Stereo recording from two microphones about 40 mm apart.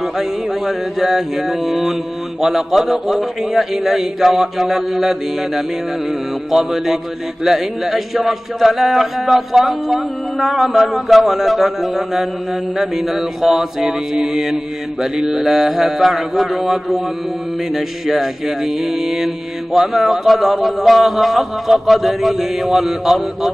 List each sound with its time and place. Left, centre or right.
0.0 s mantra: centre
2.4 s a man's voice: centre
3.7 s mantra: centre
7.4 s a man's voice: centre
12.7 s mantra: centre
20.2 s a man's voice: centre
21.9 s mantra: centre